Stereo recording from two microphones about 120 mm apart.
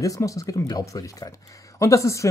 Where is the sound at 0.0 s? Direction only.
25° left (ahead or behind).